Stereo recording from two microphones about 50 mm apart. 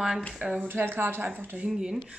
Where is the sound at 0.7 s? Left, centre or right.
Right.